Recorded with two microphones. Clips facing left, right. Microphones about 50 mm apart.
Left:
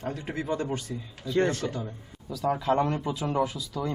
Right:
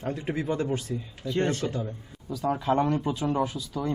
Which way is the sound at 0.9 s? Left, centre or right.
Centre.